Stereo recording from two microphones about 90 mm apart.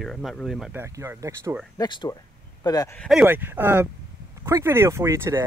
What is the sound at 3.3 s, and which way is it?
Speech, 20° right (ahead or behind).